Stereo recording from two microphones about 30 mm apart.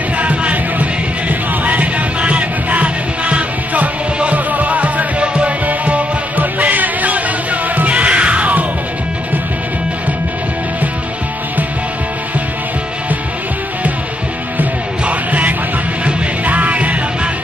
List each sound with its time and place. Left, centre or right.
0.2 s music: right
6.3 s music: right
7.9 s music: right
15.0 s music: right